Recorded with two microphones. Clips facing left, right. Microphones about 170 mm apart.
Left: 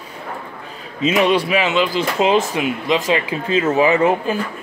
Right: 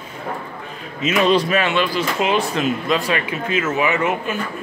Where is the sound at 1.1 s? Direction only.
10° left (ahead or behind).